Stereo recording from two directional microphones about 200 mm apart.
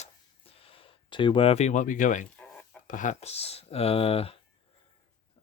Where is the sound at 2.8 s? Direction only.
40° left (ahead or behind).